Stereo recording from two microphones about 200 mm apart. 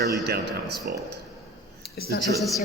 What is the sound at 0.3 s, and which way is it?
Speech, 55° right (ahead or behind).